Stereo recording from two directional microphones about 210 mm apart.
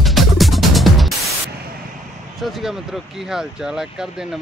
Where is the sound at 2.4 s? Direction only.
Centre (ahead or behind).